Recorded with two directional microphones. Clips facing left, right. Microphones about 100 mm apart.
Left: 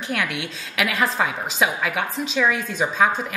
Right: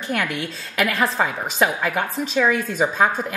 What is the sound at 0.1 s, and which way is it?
A woman's voice, centre (ahead or behind).